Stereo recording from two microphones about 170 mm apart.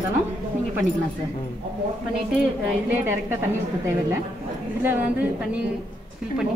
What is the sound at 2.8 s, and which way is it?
A woman's voice, 10° right (ahead or behind).